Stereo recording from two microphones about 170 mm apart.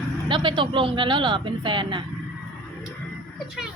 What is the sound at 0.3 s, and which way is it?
Speech, 25° right (ahead or behind).